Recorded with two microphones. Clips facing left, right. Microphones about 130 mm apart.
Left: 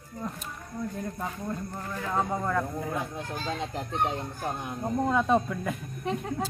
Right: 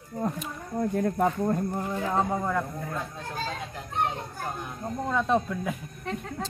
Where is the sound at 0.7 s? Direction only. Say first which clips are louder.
Right 9 dB; 60° right (ahead or behind).